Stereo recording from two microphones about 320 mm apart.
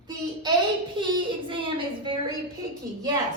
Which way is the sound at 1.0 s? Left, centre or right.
Centre.